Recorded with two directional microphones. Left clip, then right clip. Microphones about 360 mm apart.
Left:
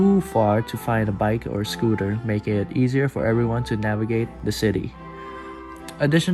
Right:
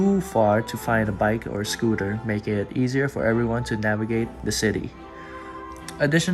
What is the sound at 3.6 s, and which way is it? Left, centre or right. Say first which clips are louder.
Speech: right 1 dB; centre.